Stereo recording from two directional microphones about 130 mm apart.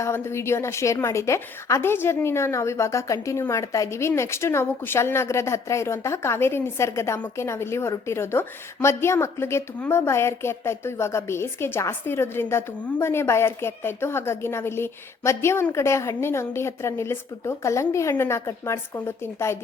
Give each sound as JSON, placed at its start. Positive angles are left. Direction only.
{"t": 0.0, "sound": "a woman's voice", "side_deg": 20}